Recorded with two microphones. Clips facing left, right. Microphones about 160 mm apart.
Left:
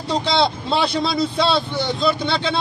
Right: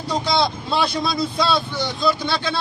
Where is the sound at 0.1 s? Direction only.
25° left (ahead or behind).